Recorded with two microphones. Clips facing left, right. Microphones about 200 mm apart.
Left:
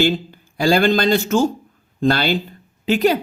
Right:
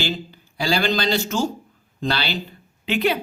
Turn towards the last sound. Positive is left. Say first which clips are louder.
# left 5 dB
turn(degrees=40)  # may be behind; listen again after turning